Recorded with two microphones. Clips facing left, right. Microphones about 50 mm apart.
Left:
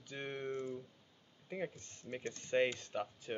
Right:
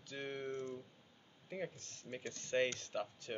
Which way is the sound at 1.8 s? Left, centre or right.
Right.